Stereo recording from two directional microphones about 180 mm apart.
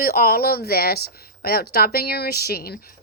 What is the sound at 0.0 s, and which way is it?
Speech, 55° left (ahead or behind).